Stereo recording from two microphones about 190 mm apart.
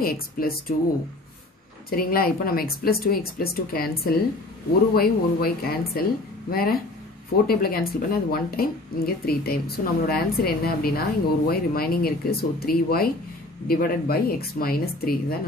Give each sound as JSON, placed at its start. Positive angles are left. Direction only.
{"t": 0.0, "sound": "speech", "side_deg": 50}
{"t": 1.9, "sound": "speech", "side_deg": 50}